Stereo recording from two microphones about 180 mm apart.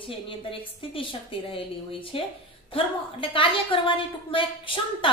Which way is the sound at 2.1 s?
30° left (ahead or behind).